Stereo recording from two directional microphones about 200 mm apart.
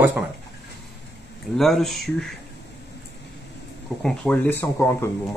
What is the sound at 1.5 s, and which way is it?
Speech, centre (ahead or behind).